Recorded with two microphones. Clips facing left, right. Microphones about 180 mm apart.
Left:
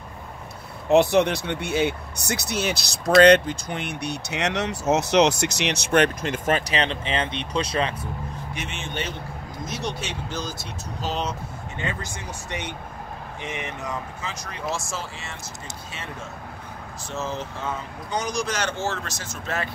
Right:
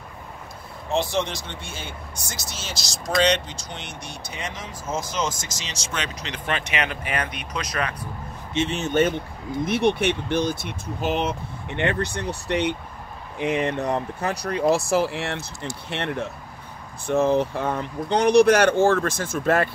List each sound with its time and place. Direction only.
0.8 s speech: 60° left (ahead or behind); by 8.1 s 25° left (ahead or behind)
8.5 s speech: 35° right (ahead or behind); by 19.7 s 50° right (ahead or behind)